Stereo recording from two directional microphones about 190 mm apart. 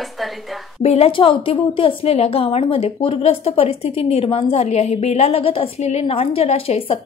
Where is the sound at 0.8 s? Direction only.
35° left (ahead or behind).